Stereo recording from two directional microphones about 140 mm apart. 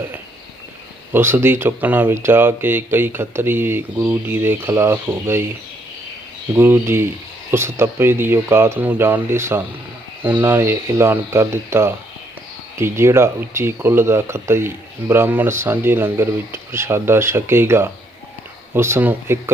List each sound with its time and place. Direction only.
1.1 s speech: 15° right (ahead or behind)
6.5 s speech: 15° right (ahead or behind)